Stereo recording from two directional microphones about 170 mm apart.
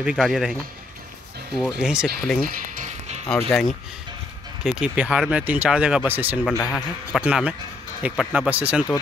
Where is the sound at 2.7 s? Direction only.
45° right (ahead or behind).